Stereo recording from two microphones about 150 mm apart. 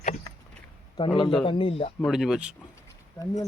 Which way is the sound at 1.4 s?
35° left (ahead or behind).